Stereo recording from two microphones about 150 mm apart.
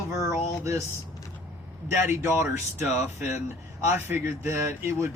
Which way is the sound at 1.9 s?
15° right (ahead or behind).